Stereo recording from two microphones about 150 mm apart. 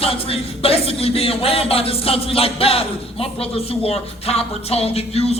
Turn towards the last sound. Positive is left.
turn(degrees=40)  # may be behind; listen again after turning